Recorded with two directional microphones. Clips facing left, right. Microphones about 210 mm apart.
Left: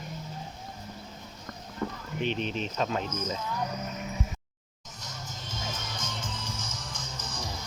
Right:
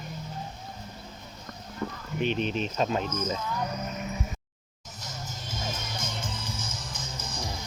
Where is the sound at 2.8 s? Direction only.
20° right (ahead or behind).